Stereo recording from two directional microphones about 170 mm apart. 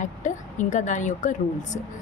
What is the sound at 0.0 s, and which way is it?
A woman's voice, 45° left (ahead or behind).